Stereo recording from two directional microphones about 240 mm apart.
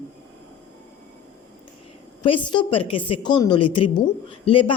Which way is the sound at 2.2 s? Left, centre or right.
Left.